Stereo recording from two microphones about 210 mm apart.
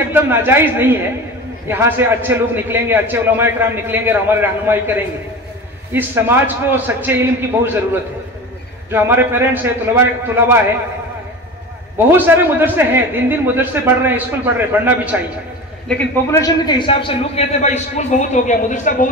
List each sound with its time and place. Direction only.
0.1 s a man's voice: 10° right (ahead or behind)
12.1 s a man's voice: 10° right (ahead or behind)
15.9 s a man's voice: 10° left (ahead or behind); by 19.0 s 35° left (ahead or behind)